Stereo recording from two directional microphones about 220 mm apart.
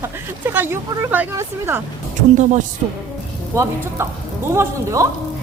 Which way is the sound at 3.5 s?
15° right (ahead or behind).